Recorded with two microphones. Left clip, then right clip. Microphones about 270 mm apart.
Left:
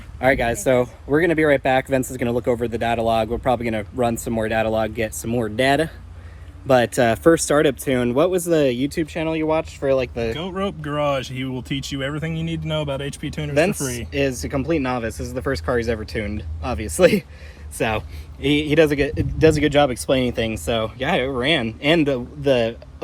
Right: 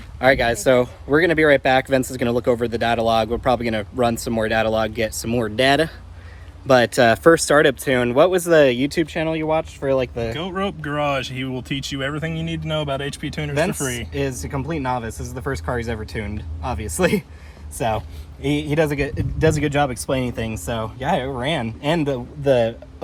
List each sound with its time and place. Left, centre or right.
0.2 s speech: centre
8.9 s speech: right
10.3 s speech: centre
15.4 s speech: centre
17.7 s speech: centre